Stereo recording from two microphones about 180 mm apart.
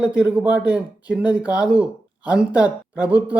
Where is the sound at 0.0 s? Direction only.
5° right (ahead or behind).